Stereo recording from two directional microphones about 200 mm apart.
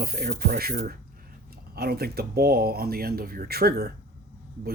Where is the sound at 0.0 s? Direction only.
50° right (ahead or behind).